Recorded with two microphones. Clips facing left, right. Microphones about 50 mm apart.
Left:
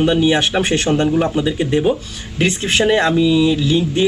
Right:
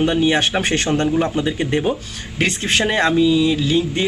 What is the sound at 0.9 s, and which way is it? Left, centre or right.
Speech, centre.